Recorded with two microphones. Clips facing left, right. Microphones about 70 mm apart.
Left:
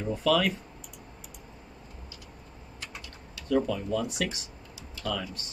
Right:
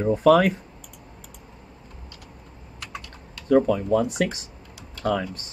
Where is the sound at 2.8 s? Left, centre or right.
Right.